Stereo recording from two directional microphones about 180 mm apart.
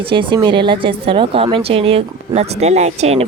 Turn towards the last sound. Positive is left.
turn(degrees=-35)  # may be behind; listen again after turning